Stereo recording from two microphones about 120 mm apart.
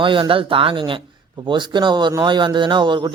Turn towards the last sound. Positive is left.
turn(degrees=-40)  # may be behind; listen again after turning